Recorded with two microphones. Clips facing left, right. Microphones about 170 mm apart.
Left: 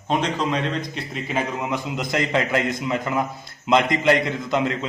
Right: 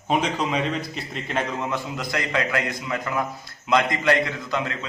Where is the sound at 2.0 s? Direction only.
25° left (ahead or behind).